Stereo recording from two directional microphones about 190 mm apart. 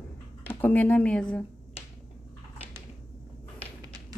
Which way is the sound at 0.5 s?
10° left (ahead or behind).